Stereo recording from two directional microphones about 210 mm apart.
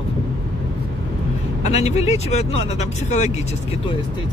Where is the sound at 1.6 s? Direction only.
30° left (ahead or behind).